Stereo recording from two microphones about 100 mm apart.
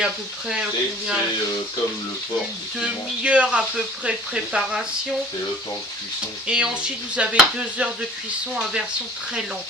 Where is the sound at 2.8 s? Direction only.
10° right (ahead or behind).